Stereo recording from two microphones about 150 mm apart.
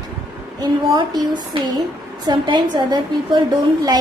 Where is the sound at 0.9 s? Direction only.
30° right (ahead or behind).